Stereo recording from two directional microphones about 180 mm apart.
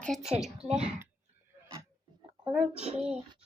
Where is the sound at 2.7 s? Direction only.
35° right (ahead or behind).